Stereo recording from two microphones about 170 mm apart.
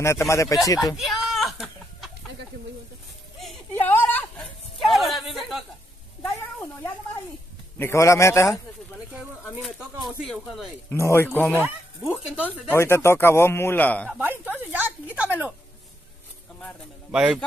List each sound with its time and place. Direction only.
0.3 s speech: 20° left (ahead or behind)
0.9 s a sound: centre (ahead or behind)
3.8 s a sound: 10° left (ahead or behind)
6.2 s cat: 20° left (ahead or behind)
7.8 s speech: 15° left (ahead or behind)
9.8 s a sound: 25° right (ahead or behind)
10.2 s speech: centre (ahead or behind)
10.9 s speech: 15° left (ahead or behind)
11.6 s bow-wow: 10° right (ahead or behind)
12.4 s speech: 10° left (ahead or behind)
14.1 s a sound: 10° right (ahead or behind)
17.1 s a man's voice: 5° right (ahead or behind)